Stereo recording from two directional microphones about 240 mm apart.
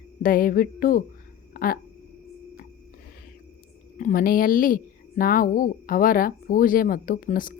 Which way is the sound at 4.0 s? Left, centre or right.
Left.